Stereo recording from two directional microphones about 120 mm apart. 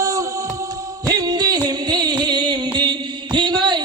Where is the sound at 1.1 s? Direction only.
35° right (ahead or behind).